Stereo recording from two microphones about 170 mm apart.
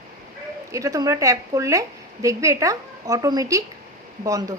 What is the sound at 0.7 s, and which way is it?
A woman's voice, 20° right (ahead or behind).